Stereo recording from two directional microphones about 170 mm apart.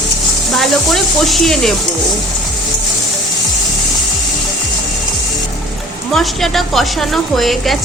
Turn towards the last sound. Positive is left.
turn(degrees=0)  # may be behind; listen again after turning